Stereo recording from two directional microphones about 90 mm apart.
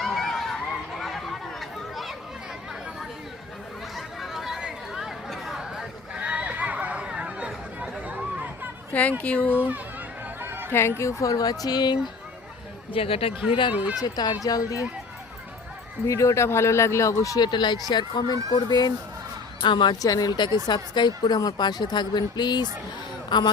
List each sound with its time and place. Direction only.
0.0 s run: 5° left (ahead or behind)
3.9 s chatter: centre (ahead or behind)
8.9 s speech: 15° left (ahead or behind)
9.6 s a child's voice: 20° right (ahead or behind)
10.4 s a sound: 25° right (ahead or behind)
10.7 s speech: 25° left (ahead or behind); by 11.9 s 50° left (ahead or behind)
12.9 s speech: 90° left
14.0 s speech: 50° left (ahead or behind)
16.0 s speech: 35° left (ahead or behind)
17.4 s speech: 55° left (ahead or behind)
20.0 s speech: 45° left (ahead or behind)